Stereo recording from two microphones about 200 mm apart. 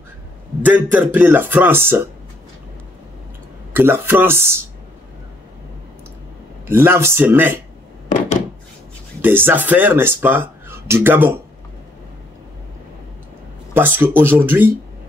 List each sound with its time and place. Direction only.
0.6 s speech: 10° right (ahead or behind)
3.7 s speech: 10° right (ahead or behind)
6.7 s speech: 10° right (ahead or behind)
9.2 s speech: 10° right (ahead or behind)
13.7 s speech: 10° right (ahead or behind)